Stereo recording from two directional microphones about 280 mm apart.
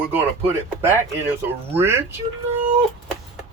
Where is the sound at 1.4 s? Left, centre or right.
Centre.